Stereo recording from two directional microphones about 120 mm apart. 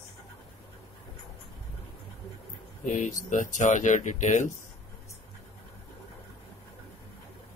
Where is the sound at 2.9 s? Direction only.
90° left.